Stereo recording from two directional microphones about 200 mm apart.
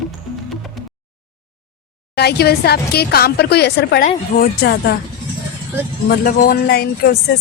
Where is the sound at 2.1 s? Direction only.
55° left (ahead or behind).